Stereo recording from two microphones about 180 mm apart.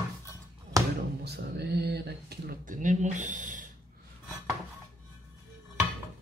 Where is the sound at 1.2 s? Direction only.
65° right (ahead or behind); by 3.6 s 45° right (ahead or behind).